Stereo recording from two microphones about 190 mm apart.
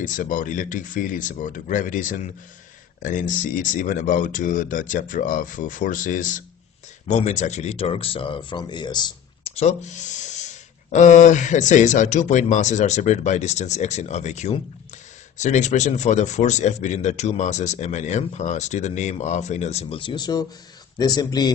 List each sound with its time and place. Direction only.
0.0 s speech: 45° left (ahead or behind); by 9.5 s 25° left (ahead or behind)
9.6 s a man's voice: 35° left (ahead or behind); by 21.5 s 20° left (ahead or behind)